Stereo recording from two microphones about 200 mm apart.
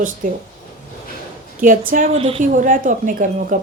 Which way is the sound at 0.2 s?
40° right (ahead or behind).